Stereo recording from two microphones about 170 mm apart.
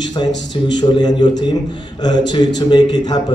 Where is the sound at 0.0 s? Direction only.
25° left (ahead or behind).